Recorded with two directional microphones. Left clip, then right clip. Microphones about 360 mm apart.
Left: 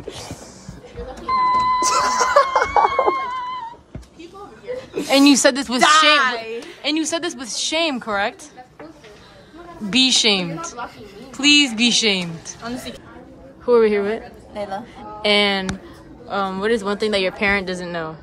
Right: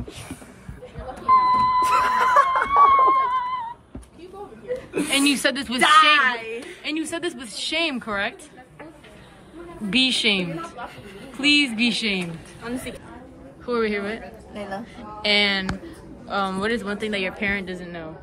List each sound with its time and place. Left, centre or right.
1.2 s a sound: centre
1.8 s snicker: centre
2.9 s a sound: centre
5.1 s a woman's voice: centre
5.8 s a woman's voice: left
6.8 s a woman's voice: centre
9.8 s a woman's voice: centre
13.7 s a woman's voice: centre